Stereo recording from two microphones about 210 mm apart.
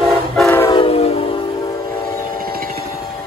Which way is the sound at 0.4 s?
10° left (ahead or behind).